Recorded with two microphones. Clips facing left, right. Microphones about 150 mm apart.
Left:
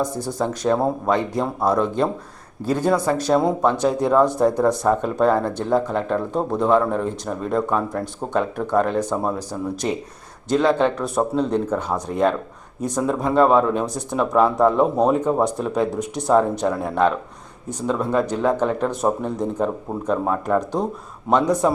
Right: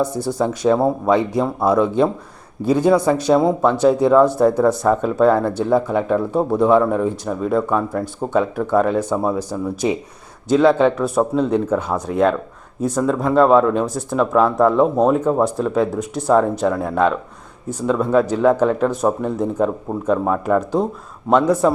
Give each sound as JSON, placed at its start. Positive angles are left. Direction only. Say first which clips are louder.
{"t": 0.3, "sound": "speech", "louder": "right 4 dB", "side_deg": -5}
{"t": 4.5, "sound": "speech", "louder": "right 3 dB", "side_deg": 15}
{"t": 4.9, "sound": "speech", "louder": "right 4 dB", "side_deg": 0}